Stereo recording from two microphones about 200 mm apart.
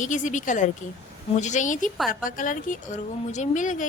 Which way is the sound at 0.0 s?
40° left (ahead or behind).